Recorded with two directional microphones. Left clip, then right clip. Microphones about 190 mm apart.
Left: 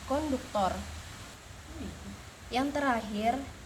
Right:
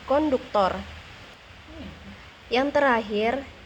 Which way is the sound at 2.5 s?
65° right (ahead or behind).